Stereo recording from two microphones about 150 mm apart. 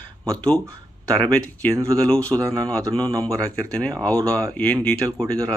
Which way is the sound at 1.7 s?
20° right (ahead or behind).